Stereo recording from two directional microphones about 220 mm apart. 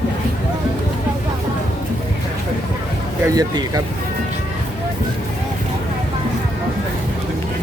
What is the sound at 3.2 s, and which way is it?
Speech, 15° right (ahead or behind).